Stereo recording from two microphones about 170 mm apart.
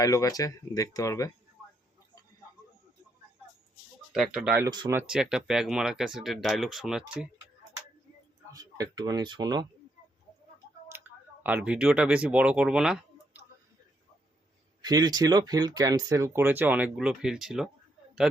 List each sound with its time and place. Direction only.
0.0 s speech: 20° left (ahead or behind)
4.1 s speech: 5° right (ahead or behind)
4.6 s speech: 20° right (ahead or behind)
4.9 s speech: 5° right (ahead or behind)
8.5 s speech: 20° right (ahead or behind)
10.9 s a sound: 10° right (ahead or behind)
11.4 s speech: 10° right (ahead or behind)
14.8 s speech: 25° right (ahead or behind); by 17.7 s centre (ahead or behind)